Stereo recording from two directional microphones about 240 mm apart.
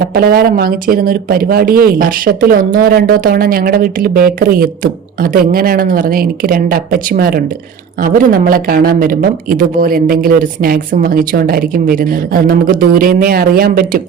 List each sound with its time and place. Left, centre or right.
0.1 s speech: right